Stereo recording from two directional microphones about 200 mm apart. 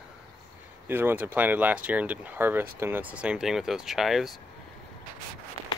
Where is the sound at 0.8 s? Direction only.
10° right (ahead or behind).